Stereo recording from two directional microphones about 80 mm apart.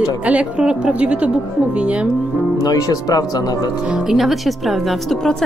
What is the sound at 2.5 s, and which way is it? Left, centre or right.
Speech, left.